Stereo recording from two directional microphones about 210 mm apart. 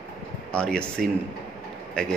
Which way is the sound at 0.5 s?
5° left (ahead or behind).